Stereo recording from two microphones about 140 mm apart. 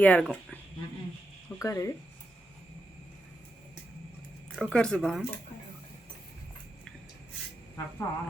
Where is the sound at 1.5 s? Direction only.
25° left (ahead or behind).